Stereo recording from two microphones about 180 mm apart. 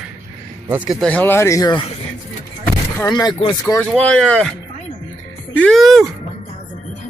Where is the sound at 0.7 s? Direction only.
10° right (ahead or behind).